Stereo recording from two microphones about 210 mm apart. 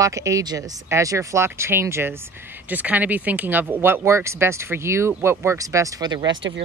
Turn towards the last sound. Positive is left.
turn(degrees=-60)  # may be behind; listen again after turning